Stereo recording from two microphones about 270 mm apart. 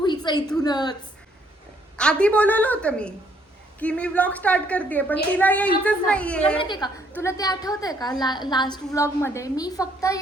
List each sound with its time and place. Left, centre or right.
0.0 s a sound: centre
0.6 s a woman's voice: centre
2.0 s a woman's voice: centre
6.6 s a woman's voice: centre